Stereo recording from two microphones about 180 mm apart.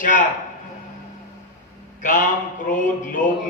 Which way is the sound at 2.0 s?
45° left (ahead or behind).